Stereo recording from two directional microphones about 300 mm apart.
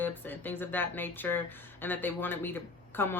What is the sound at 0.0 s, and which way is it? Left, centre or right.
Speech, centre.